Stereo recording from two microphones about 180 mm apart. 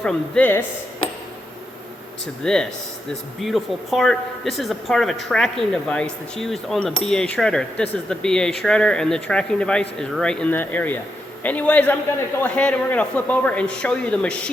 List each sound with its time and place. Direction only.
0.0 s speech: 10° left (ahead or behind)
2.4 s speech: 5° left (ahead or behind)